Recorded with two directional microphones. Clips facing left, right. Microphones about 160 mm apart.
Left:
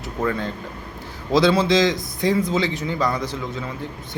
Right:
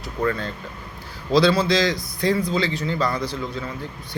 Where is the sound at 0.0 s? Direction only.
15° left (ahead or behind).